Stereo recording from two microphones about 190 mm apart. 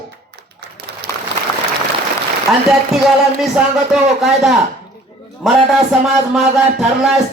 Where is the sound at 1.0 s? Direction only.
60° right (ahead or behind).